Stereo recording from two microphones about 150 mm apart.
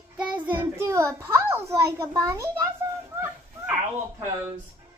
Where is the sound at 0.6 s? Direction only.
15° right (ahead or behind).